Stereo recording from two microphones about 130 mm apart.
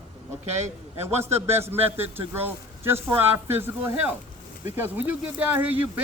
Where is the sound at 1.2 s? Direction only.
20° right (ahead or behind).